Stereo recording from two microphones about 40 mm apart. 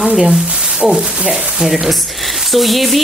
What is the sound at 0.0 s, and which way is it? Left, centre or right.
Speech, right.